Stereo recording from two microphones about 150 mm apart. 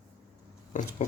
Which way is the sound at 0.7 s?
60° left (ahead or behind).